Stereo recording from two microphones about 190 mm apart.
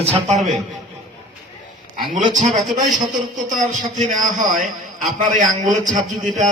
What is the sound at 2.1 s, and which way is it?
A man's voice, 40° right (ahead or behind).